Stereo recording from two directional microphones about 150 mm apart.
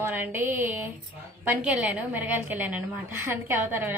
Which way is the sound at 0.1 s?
15° right (ahead or behind).